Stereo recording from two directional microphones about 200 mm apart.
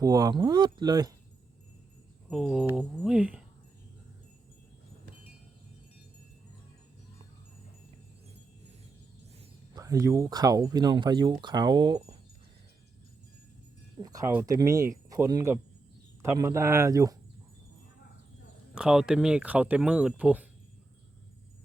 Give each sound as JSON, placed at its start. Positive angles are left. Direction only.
{"t": 0.0, "sound": "speech", "side_deg": -20}
{"t": 2.3, "sound": "speech", "side_deg": 0}
{"t": 9.7, "sound": "speech", "side_deg": -15}
{"t": 14.0, "sound": "speech", "side_deg": -15}
{"t": 18.7, "sound": "speech", "side_deg": -5}